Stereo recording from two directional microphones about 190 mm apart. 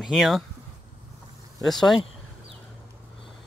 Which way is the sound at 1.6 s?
Centre (ahead or behind).